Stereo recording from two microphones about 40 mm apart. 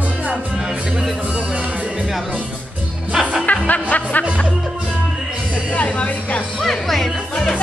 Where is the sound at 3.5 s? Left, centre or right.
Left.